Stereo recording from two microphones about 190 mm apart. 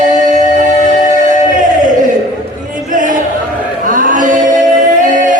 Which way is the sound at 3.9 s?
45° right (ahead or behind).